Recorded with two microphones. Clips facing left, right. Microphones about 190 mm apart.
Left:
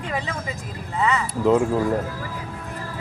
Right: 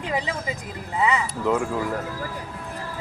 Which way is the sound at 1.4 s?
20° left (ahead or behind).